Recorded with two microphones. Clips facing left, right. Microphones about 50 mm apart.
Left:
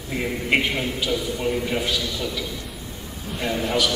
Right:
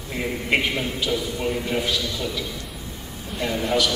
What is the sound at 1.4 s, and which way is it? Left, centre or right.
Speech, centre.